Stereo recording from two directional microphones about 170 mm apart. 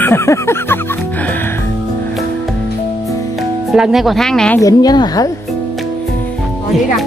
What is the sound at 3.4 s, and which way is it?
Speech, centre (ahead or behind).